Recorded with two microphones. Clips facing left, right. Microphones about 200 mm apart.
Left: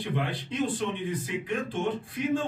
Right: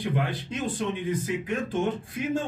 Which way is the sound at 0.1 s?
45° right (ahead or behind).